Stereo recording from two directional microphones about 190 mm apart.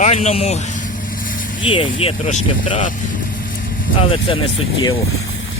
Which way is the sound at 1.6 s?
30° left (ahead or behind).